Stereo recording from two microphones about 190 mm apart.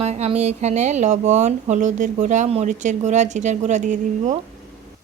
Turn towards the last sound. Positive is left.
turn(degrees=-40)  # may be behind; listen again after turning